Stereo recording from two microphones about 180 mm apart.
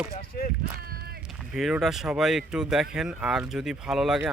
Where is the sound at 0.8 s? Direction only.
55° right (ahead or behind).